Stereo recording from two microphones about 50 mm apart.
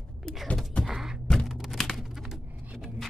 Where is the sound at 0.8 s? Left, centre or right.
Centre.